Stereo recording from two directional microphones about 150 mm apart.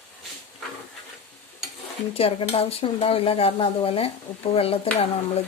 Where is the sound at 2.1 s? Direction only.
40° left (ahead or behind).